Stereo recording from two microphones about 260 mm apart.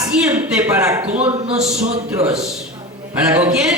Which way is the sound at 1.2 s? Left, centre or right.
Right.